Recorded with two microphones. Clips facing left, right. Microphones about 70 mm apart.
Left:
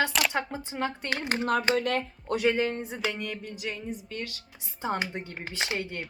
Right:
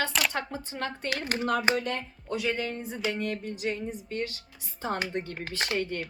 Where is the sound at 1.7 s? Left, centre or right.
Left.